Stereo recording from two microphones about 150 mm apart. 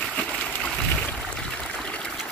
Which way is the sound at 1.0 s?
10° left (ahead or behind).